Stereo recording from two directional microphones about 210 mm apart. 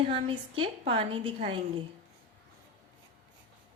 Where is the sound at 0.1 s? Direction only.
25° right (ahead or behind).